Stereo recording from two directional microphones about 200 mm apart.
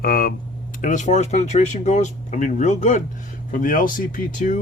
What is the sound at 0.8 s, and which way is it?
Speech, 40° left (ahead or behind).